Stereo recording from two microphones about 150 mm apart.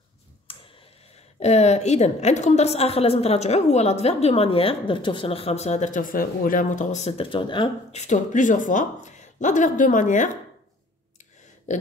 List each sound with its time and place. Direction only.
0.5 s tick: 35° left (ahead or behind)
1.4 s a woman's voice: 45° left (ahead or behind)
7.9 s speech: 50° left (ahead or behind)
11.7 s speech: 55° left (ahead or behind)